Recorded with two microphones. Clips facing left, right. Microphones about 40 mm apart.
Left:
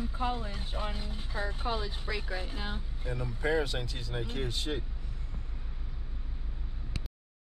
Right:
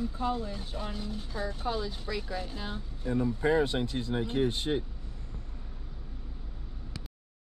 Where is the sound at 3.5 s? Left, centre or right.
Right.